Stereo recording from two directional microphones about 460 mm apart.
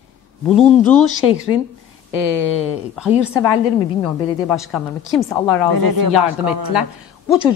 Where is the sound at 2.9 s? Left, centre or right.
Centre.